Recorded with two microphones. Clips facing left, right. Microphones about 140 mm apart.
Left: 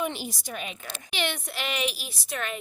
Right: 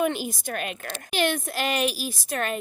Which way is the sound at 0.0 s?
50° right (ahead or behind).